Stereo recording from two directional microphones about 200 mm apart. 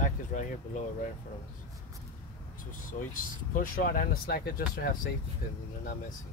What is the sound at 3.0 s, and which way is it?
Speech, 45° left (ahead or behind).